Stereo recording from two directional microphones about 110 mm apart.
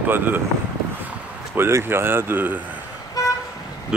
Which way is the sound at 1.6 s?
20° right (ahead or behind).